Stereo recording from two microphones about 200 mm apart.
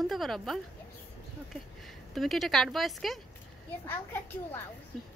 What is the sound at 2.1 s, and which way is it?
A woman's voice, centre (ahead or behind).